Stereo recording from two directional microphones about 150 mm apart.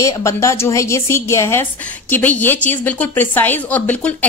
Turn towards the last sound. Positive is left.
turn(degrees=10)  # may be behind; listen again after turning